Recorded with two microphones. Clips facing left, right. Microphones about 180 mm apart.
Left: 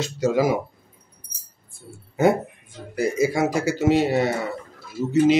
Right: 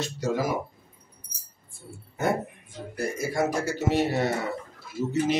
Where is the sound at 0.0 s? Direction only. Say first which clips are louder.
Left 7 dB; 90° left.